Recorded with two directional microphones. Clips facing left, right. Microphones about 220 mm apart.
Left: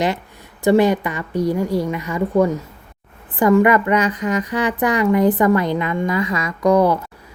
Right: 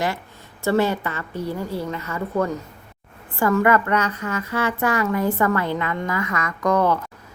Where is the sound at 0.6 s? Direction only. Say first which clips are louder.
Left 6 dB; 15° left (ahead or behind).